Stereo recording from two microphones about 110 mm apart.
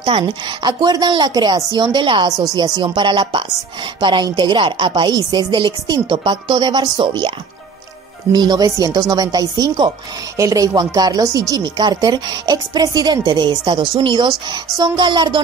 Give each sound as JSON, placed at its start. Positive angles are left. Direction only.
{"t": 0.0, "sound": "speech", "side_deg": -40}